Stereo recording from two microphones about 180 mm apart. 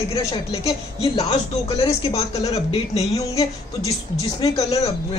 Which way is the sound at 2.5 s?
35° left (ahead or behind).